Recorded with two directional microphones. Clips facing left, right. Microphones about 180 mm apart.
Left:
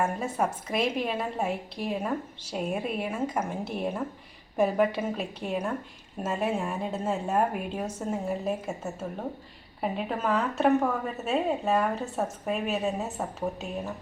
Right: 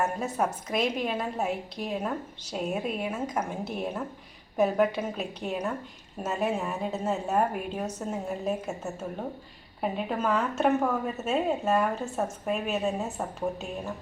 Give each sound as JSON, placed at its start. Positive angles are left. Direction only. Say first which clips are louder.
{"t": 0.2, "sound": "a woman's voice", "louder": "even", "side_deg": 0}